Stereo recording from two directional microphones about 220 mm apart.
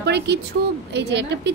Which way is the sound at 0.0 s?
50° right (ahead or behind).